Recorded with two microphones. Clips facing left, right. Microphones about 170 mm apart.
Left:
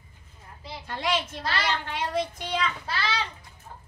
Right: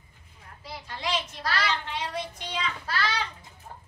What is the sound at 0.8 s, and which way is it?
Speech, 55° left (ahead or behind).